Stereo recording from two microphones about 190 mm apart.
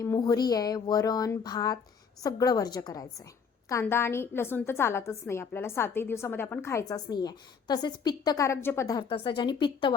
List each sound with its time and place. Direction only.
0.0 s a woman's voice: 20° left (ahead or behind)